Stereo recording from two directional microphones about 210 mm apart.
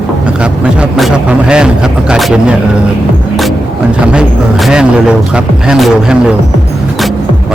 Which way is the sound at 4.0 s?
5° right (ahead or behind).